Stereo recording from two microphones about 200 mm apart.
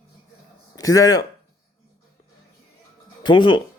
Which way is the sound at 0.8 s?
15° left (ahead or behind).